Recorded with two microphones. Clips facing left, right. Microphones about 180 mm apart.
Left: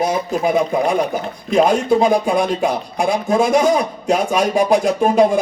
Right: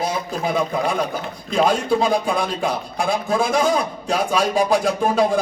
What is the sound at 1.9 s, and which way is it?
Speech, 20° left (ahead or behind).